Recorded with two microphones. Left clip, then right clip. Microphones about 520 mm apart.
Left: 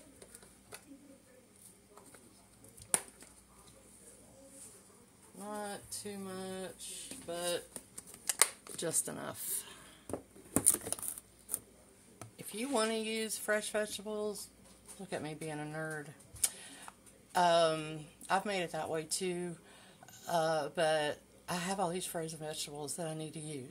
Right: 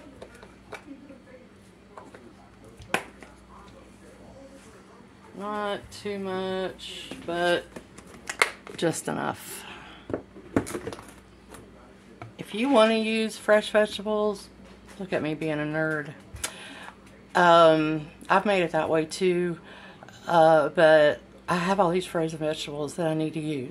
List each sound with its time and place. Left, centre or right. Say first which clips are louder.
5.5 s speech: right 12 dB; left
8.3 s a sound: right 9 dB; left
8.7 s speech: right 11 dB; left
12.4 s speech: right 14 dB; left